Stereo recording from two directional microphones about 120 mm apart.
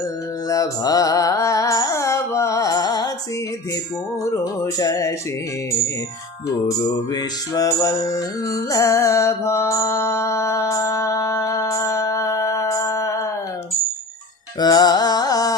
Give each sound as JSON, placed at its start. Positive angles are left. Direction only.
{"t": 0.4, "sound": "music", "side_deg": 30}
{"t": 4.2, "sound": "music", "side_deg": 25}
{"t": 6.7, "sound": "music", "side_deg": 30}
{"t": 14.6, "sound": "music", "side_deg": 35}